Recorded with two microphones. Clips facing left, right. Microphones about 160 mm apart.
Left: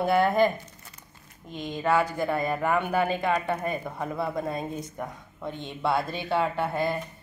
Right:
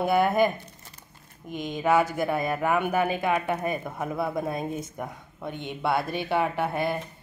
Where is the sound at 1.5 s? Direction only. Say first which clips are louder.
Right 2 dB; 15° right (ahead or behind).